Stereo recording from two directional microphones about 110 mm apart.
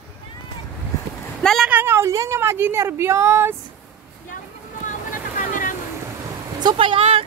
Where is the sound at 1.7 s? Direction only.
20° right (ahead or behind).